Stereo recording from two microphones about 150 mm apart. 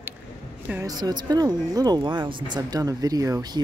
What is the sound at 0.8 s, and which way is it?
Speech, 25° right (ahead or behind).